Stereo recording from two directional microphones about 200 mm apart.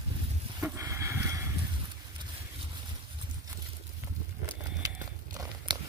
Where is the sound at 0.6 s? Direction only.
15° right (ahead or behind).